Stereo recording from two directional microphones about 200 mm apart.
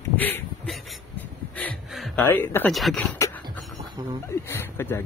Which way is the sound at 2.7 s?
Centre (ahead or behind).